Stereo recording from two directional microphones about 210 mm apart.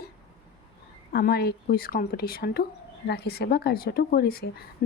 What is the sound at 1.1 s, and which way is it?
A woman's voice, 50° left (ahead or behind).